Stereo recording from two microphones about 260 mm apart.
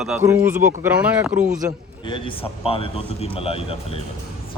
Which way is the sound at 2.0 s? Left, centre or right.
Centre.